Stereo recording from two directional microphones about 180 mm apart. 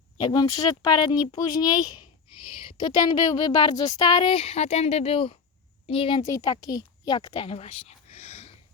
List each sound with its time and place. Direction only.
0.2 s a woman's voice: 20° left (ahead or behind)